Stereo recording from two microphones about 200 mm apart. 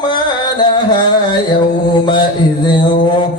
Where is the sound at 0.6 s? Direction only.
20° left (ahead or behind).